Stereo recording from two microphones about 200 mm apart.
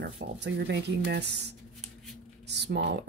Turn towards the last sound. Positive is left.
turn(degrees=-60)  # may be behind; listen again after turning